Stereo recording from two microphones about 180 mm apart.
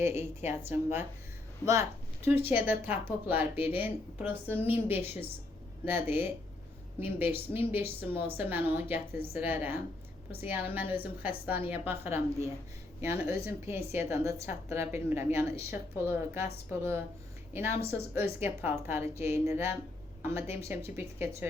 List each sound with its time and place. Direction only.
0.0 s a woman's voice: 15° right (ahead or behind)